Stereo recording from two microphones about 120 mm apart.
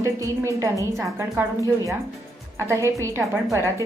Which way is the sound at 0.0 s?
25° right (ahead or behind).